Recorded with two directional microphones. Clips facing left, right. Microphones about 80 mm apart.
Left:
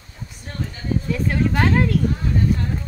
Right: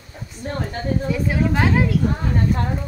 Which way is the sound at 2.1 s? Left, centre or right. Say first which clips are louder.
Even; right.